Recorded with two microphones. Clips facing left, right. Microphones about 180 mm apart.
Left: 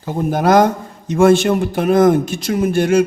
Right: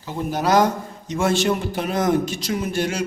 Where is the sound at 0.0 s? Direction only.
50° left (ahead or behind).